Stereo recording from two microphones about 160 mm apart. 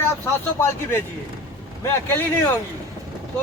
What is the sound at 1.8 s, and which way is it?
Speech, 20° left (ahead or behind).